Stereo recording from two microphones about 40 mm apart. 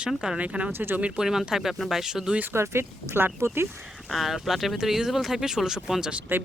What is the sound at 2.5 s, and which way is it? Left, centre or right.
Speech, right.